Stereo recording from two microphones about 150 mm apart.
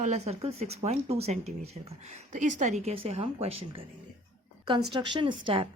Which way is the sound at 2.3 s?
55° right (ahead or behind).